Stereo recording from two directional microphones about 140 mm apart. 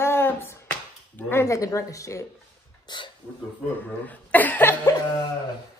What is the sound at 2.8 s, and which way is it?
Speech, 35° left (ahead or behind).